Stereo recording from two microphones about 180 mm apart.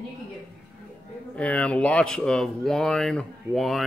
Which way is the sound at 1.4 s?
5° left (ahead or behind).